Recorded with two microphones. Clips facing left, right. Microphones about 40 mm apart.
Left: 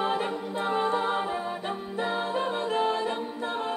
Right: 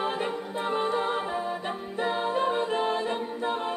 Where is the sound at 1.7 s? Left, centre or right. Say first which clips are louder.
Right 1 dB; centre.